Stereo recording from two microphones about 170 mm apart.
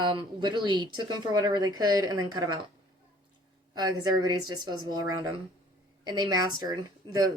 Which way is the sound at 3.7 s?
25° right (ahead or behind).